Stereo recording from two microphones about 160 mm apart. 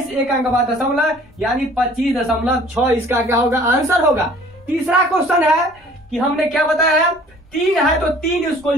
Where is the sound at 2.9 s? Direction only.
20° right (ahead or behind).